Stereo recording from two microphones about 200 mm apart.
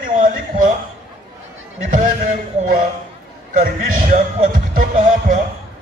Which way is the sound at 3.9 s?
45° right (ahead or behind).